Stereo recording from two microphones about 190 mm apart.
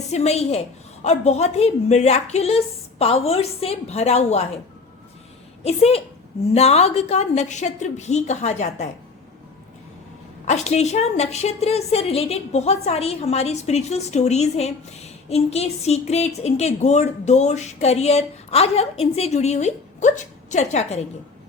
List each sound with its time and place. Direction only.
0.1 s a woman's voice: 35° left (ahead or behind)
5.6 s a woman's voice: 35° left (ahead or behind)
10.4 s a woman's voice: 35° left (ahead or behind)